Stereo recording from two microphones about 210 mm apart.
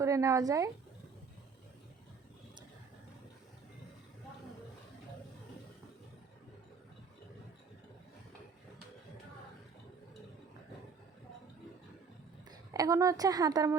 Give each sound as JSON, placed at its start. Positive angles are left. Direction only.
{"t": 0.0, "sound": "speech", "side_deg": -15}
{"t": 12.5, "sound": "a woman's voice", "side_deg": -15}